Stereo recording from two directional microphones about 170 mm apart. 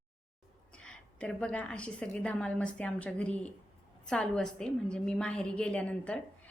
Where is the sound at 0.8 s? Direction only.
5° left (ahead or behind).